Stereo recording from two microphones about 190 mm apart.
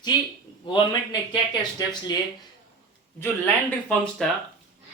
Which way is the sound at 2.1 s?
20° left (ahead or behind).